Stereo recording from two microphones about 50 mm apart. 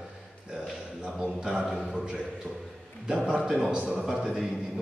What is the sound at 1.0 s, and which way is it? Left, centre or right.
Speech, centre.